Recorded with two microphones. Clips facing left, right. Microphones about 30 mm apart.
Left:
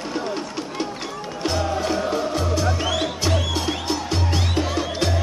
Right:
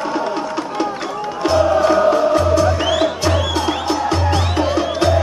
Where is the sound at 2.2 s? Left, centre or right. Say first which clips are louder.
Right 9 dB; centre.